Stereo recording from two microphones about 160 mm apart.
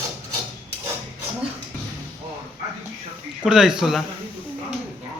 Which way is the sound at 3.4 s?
5° right (ahead or behind).